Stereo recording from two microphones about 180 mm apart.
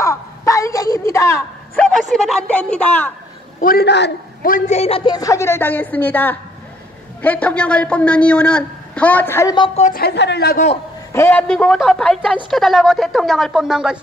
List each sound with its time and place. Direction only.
0.0 s a sound: 15° left (ahead or behind)
1.9 s speech: centre (ahead or behind)
3.6 s a man's voice: 65° left (ahead or behind)
4.5 s a man's voice: 45° left (ahead or behind); by 9.6 s 15° left (ahead or behind)
9.8 s a woman's voice: 45° left (ahead or behind)
10.0 s a man's voice: 70° left (ahead or behind)
11.1 s speech: 15° left (ahead or behind); by 13.9 s 5° right (ahead or behind)